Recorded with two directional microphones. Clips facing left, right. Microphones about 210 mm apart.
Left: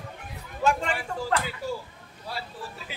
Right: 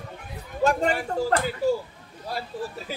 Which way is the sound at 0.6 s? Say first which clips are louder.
Right 3 dB; 40° right (ahead or behind).